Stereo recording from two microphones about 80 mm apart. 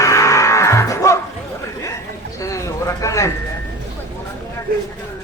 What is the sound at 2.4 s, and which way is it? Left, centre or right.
Speech, left.